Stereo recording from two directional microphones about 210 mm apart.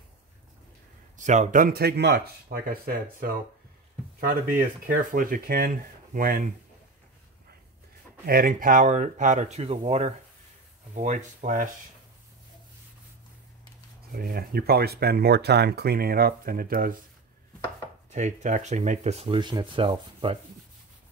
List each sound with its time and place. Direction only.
1.1 s speech: 35° right (ahead or behind)
4.5 s speech: 40° right (ahead or behind)
8.3 s speech: 40° right (ahead or behind)
14.1 s speech: 45° right (ahead or behind)
18.1 s speech: 35° right (ahead or behind)